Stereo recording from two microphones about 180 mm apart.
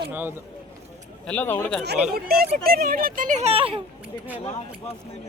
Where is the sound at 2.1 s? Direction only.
55° right (ahead or behind); by 3.8 s 30° right (ahead or behind).